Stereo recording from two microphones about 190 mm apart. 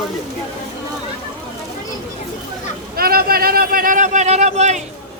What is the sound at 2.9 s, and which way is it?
A man's voice, 50° right (ahead or behind).